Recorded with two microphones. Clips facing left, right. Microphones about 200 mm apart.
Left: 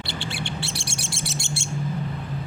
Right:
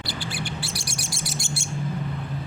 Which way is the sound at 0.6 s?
25° left (ahead or behind).